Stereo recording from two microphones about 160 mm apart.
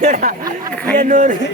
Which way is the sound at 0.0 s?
55° right (ahead or behind).